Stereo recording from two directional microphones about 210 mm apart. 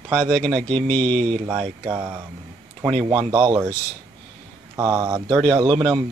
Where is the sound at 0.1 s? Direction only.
5° left (ahead or behind).